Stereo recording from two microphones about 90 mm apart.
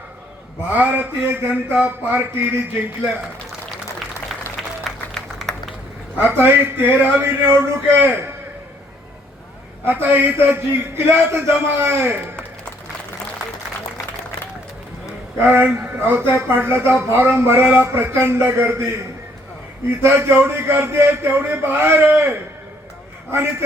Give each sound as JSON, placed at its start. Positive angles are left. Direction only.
{"t": 0.8, "sound": "speech", "side_deg": -20}
{"t": 4.8, "sound": "a sound", "side_deg": 5}
{"t": 6.1, "sound": "speech", "side_deg": -20}
{"t": 9.8, "sound": "speech", "side_deg": -25}
{"t": 15.4, "sound": "speech", "side_deg": -20}
{"t": 20.0, "sound": "speech", "side_deg": -25}